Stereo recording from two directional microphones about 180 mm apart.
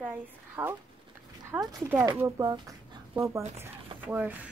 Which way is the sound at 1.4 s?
15° right (ahead or behind).